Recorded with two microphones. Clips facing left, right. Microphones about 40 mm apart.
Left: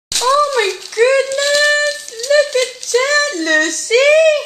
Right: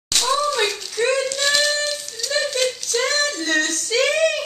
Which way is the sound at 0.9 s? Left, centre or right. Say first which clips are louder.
Left 9 dB; left.